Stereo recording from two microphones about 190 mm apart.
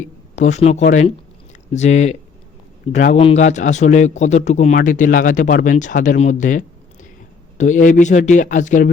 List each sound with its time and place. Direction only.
0.0 s a man's voice: 40° left (ahead or behind)